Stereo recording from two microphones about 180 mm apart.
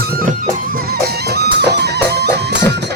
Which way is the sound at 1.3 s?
65° right (ahead or behind).